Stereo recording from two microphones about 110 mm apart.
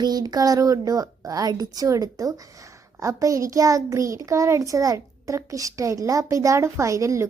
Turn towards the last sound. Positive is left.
turn(degrees=-30)  # may be behind; listen again after turning